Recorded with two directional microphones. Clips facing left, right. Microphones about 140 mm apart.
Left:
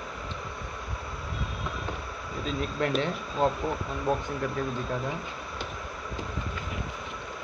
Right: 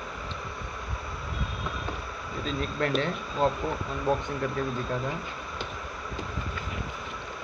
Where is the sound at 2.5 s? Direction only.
15° left (ahead or behind).